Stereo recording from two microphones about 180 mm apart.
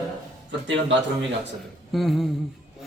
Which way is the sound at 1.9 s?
Centre (ahead or behind).